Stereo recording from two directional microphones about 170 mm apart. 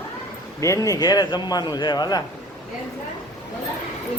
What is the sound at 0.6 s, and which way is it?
A man's voice, 20° left (ahead or behind).